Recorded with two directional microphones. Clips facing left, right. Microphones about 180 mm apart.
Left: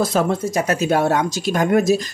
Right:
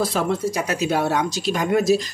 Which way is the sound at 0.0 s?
45° left (ahead or behind).